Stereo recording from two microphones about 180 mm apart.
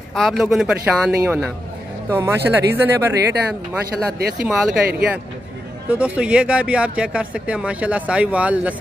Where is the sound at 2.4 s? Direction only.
70° right (ahead or behind).